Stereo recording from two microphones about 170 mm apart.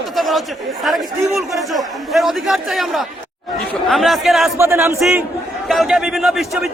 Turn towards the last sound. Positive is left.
turn(degrees=0)  # may be behind; listen again after turning